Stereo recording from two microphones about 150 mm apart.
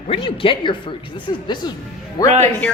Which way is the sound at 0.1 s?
35° left (ahead or behind).